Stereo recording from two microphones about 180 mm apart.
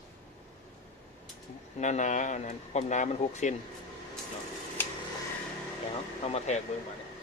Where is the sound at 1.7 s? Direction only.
40° left (ahead or behind).